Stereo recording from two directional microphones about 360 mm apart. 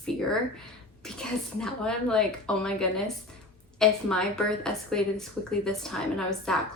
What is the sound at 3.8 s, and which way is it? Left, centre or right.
A woman's voice, centre.